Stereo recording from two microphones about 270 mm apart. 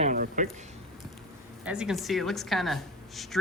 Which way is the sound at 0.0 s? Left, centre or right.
Right.